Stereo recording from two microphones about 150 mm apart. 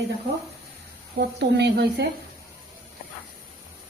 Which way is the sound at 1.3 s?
90° right.